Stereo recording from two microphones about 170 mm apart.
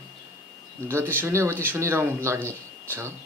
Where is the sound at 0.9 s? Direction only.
15° right (ahead or behind).